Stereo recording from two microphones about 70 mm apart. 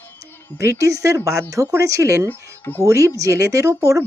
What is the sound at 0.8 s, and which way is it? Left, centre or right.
Speech, right.